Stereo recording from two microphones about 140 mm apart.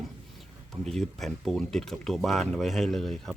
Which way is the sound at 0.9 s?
Centre (ahead or behind).